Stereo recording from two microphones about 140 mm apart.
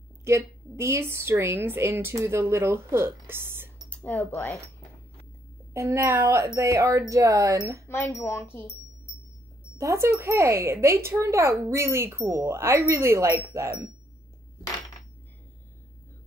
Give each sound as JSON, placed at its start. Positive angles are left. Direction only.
{"t": 0.2, "sound": "a woman's voice", "side_deg": -20}
{"t": 3.9, "sound": "speech", "side_deg": 10}
{"t": 5.7, "sound": "speech", "side_deg": -20}
{"t": 7.9, "sound": "speech", "side_deg": 20}
{"t": 9.8, "sound": "speech", "side_deg": -20}